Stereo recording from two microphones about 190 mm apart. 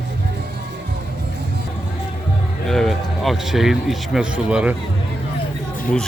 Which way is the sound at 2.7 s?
Centre (ahead or behind).